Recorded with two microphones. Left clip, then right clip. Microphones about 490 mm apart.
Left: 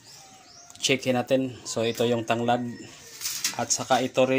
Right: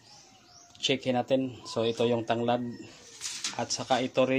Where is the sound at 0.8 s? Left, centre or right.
Right.